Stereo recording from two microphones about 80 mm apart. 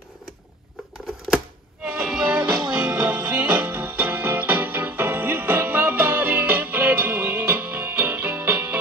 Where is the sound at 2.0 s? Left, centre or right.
Centre.